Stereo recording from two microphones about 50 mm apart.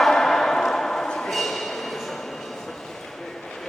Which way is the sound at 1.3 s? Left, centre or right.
Centre.